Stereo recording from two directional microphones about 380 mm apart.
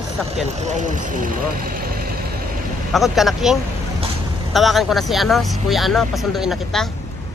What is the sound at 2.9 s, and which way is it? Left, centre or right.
Speech, centre.